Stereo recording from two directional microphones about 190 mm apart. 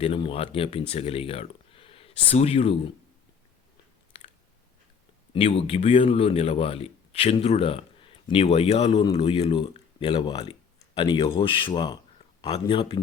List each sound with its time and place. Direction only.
0.0 s speech: 30° left (ahead or behind)
5.3 s a man's voice: 30° left (ahead or behind)